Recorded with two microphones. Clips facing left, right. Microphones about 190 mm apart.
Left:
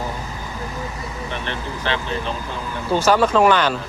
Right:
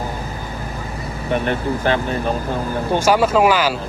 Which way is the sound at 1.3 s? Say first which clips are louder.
Right 12 dB; 45° right (ahead or behind).